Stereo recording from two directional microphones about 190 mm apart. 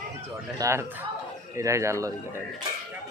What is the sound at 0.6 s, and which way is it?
Speech, 15° right (ahead or behind).